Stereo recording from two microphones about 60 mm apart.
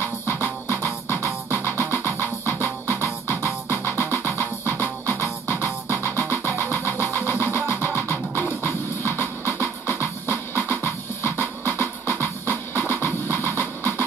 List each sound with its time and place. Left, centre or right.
0.0 s music: left
6.6 s vehicle: left
7.2 s music: left